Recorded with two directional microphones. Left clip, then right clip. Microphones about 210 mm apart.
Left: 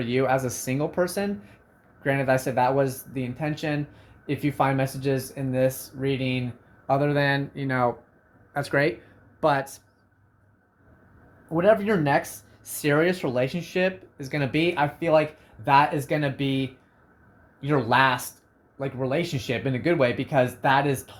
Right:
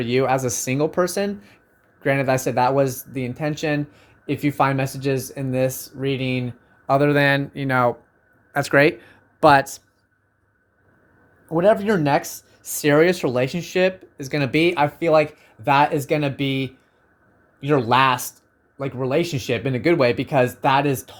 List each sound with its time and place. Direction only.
0.0 s speech: 55° right (ahead or behind)
11.4 s speech: 50° right (ahead or behind)